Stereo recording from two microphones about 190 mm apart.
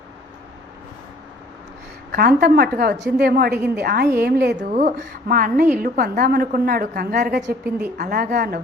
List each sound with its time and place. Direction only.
2.1 s a woman's voice: 55° right (ahead or behind)
4.7 s a woman's voice: 40° right (ahead or behind)
7.4 s a woman's voice: 10° right (ahead or behind)
7.9 s a woman's voice: 50° right (ahead or behind)